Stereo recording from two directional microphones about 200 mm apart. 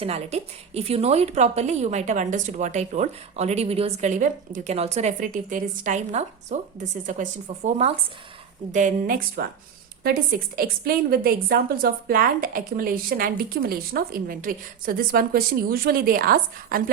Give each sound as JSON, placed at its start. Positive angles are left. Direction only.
{"t": 0.0, "sound": "a woman's voice", "side_deg": -30}
{"t": 10.6, "sound": "a woman's voice", "side_deg": -50}